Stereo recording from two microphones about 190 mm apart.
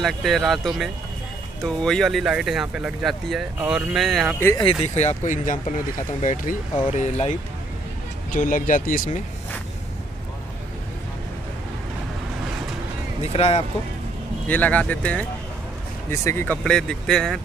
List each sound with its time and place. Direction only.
0.0 s speech: centre (ahead or behind)
4.8 s speech: 35° left (ahead or behind)
13.2 s speech: 35° left (ahead or behind)
14.5 s speech: 10° left (ahead or behind)